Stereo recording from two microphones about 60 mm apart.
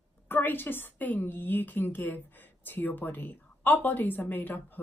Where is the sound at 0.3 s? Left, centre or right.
Left.